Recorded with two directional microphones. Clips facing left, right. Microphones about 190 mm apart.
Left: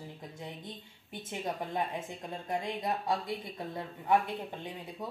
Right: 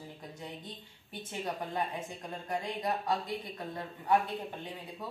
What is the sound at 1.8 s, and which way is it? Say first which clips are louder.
Speech: left 1 dB; 20° left (ahead or behind).